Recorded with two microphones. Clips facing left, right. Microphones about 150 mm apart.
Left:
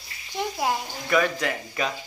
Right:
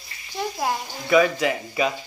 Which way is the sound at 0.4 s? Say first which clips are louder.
Even; 15° left (ahead or behind).